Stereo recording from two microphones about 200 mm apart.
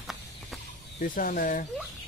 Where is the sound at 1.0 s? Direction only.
45° left (ahead or behind).